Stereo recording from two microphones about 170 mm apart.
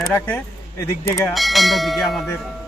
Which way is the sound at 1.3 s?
Centre (ahead or behind).